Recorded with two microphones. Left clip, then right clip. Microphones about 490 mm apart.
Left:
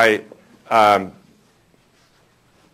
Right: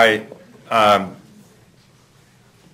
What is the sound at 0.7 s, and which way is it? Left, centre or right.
Speech, left.